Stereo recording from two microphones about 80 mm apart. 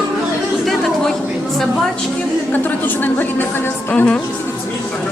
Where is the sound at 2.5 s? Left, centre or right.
Left.